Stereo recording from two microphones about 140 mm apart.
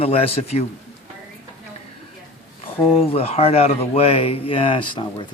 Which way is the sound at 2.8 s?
45° left (ahead or behind).